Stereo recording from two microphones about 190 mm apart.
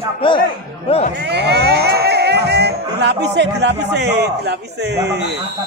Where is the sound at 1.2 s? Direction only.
60° right (ahead or behind).